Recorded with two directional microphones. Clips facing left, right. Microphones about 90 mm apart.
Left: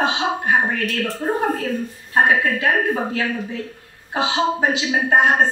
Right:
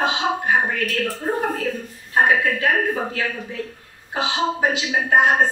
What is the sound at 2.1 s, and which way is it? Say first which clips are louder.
A woman's voice: left 1 dB; 20° left (ahead or behind).